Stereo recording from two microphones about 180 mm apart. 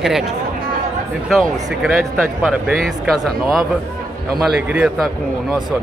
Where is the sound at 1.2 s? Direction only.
Centre (ahead or behind).